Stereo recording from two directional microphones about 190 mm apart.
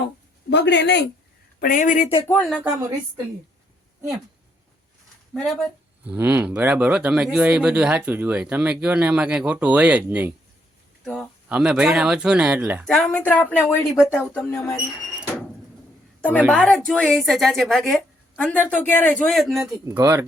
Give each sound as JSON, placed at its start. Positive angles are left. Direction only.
{"t": 0.5, "sound": "speech", "side_deg": 70}
{"t": 1.6, "sound": "speech", "side_deg": 45}
{"t": 2.2, "sound": "a woman's voice", "side_deg": 5}
{"t": 5.3, "sound": "a woman's voice", "side_deg": 0}
{"t": 12.8, "sound": "a woman's voice", "side_deg": 5}
{"t": 16.5, "sound": "a woman's voice", "side_deg": 5}
{"t": 19.8, "sound": "speech", "side_deg": -15}